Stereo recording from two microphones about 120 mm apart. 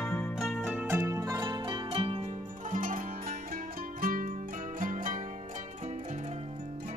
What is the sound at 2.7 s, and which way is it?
Zither, 90° right.